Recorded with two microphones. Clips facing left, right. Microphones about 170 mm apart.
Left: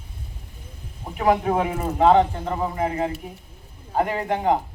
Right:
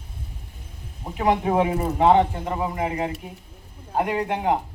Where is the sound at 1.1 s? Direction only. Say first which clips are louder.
Even; 20° right (ahead or behind).